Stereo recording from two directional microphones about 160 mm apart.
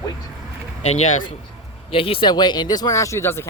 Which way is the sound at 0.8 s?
45° left (ahead or behind).